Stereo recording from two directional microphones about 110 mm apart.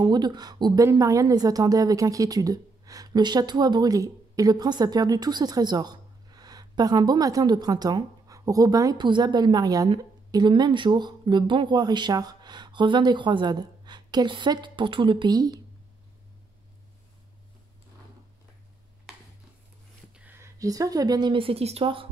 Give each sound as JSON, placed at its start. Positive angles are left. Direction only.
{"t": 0.0, "sound": "a woman's voice", "side_deg": -40}
{"t": 9.8, "sound": "speech", "side_deg": -45}
{"t": 19.1, "sound": "a sound", "side_deg": -5}
{"t": 20.2, "sound": "a woman's voice", "side_deg": -20}